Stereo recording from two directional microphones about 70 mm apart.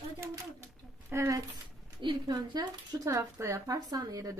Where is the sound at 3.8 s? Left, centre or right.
Right.